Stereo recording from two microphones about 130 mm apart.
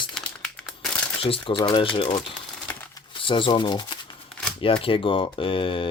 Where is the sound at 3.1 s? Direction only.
40° left (ahead or behind).